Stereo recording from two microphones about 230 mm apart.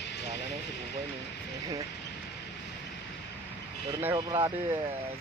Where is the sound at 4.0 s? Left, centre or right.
Centre.